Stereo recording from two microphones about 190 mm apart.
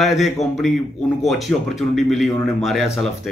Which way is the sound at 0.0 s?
Centre (ahead or behind).